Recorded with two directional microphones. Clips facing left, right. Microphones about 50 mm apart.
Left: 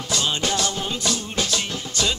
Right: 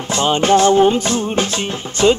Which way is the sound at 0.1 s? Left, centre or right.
Right.